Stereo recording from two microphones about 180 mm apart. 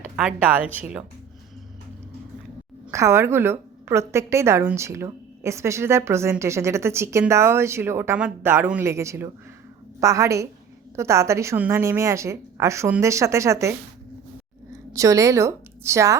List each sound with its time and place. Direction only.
0.2 s a woman's voice: 5° right (ahead or behind)
2.9 s a woman's voice: 15° right (ahead or behind)
14.9 s a woman's voice: 15° right (ahead or behind)